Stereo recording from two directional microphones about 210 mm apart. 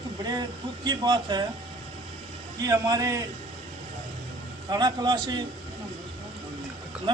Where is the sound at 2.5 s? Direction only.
15° right (ahead or behind).